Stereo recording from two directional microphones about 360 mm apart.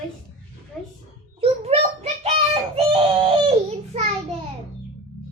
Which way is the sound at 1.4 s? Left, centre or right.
Centre.